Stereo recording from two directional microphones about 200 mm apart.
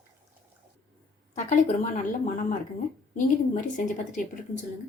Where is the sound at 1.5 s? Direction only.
40° left (ahead or behind).